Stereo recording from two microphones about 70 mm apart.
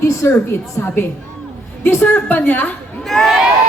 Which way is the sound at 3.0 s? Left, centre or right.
Centre.